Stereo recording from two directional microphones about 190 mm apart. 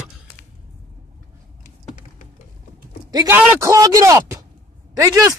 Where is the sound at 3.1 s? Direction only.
15° right (ahead or behind).